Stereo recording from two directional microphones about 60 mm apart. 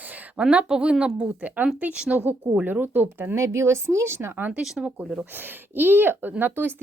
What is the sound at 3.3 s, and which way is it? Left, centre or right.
Speech, right.